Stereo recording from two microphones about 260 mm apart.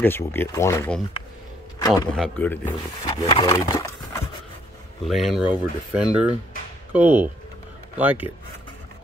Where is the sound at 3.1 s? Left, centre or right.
Left.